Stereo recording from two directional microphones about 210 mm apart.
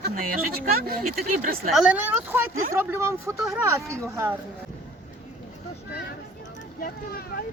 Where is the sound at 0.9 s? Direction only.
45° right (ahead or behind).